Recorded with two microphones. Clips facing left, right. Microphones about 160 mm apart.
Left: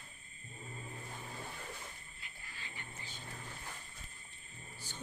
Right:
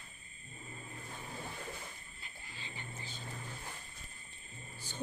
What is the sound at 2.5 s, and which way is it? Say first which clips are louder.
Wild animals: right 3 dB; 25° right (ahead or behind).